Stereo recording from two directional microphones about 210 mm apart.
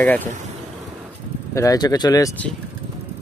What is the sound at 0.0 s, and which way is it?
Speech, 5° left (ahead or behind).